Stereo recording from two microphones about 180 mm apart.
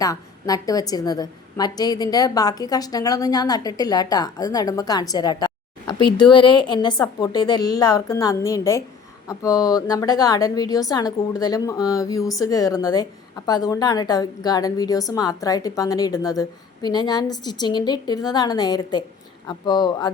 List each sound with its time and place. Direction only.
0.0 s a woman's voice: 20° left (ahead or behind)